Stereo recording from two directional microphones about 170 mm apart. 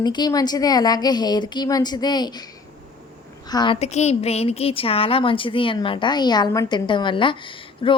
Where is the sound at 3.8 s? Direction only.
40° left (ahead or behind).